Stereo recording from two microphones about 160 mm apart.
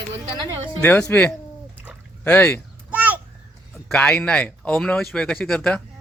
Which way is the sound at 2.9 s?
10° right (ahead or behind).